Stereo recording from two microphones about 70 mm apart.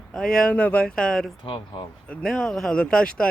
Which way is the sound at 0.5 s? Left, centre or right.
Centre.